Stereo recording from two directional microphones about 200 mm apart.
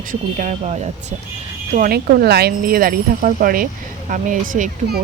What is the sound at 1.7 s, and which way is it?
Speech, 45° right (ahead or behind).